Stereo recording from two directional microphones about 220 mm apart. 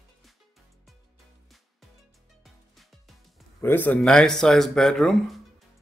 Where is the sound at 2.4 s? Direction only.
Centre (ahead or behind).